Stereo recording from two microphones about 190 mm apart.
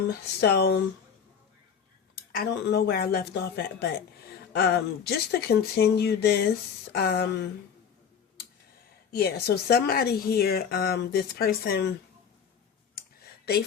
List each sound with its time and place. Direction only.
0.1 s a woman's voice: 60° left (ahead or behind)
2.3 s a woman's voice: 55° left (ahead or behind)
9.1 s a woman's voice: 55° left (ahead or behind)